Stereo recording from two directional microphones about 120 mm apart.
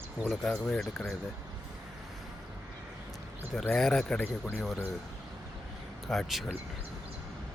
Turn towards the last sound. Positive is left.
turn(degrees=0)  # may be behind; listen again after turning